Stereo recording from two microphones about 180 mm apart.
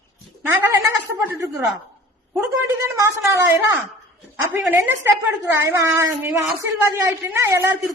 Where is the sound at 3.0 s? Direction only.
15° right (ahead or behind).